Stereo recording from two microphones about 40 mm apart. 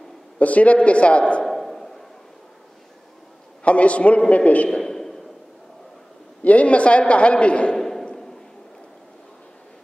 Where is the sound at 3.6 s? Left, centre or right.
Left.